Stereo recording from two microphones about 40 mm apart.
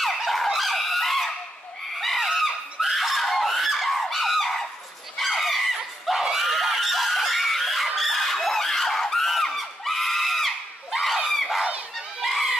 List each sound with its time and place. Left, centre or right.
0.0 s fowl: centre
2.0 s a sound: centre
4.0 s fowl: centre
5.1 s a sound: centre
6.3 s screaming: centre
11.3 s crowd: centre
12.2 s goose: centre